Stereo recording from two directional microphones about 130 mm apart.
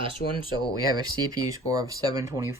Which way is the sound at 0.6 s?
30° right (ahead or behind).